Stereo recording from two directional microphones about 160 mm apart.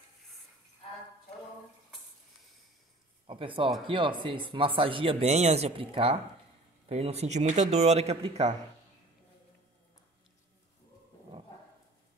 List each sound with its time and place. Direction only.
3.3 s speech: 35° right (ahead or behind)